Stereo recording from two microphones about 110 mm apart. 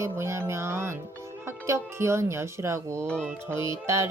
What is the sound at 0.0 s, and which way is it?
Speech, 25° right (ahead or behind).